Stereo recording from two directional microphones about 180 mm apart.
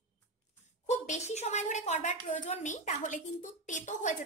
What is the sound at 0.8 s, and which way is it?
A woman's voice, 40° left (ahead or behind).